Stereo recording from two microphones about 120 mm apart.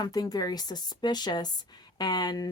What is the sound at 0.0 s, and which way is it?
Speech, 35° left (ahead or behind).